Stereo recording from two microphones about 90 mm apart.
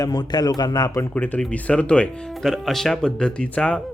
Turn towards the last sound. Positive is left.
turn(degrees=10)  # may be behind; listen again after turning